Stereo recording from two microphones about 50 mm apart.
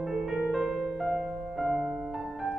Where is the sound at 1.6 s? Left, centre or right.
Centre.